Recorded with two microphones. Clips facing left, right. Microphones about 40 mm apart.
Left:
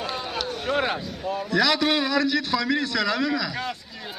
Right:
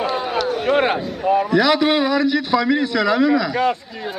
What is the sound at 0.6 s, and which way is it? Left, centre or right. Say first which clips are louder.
Speech: right 7 dB; right.